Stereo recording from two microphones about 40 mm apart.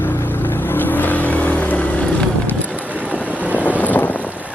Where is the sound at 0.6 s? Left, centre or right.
Left.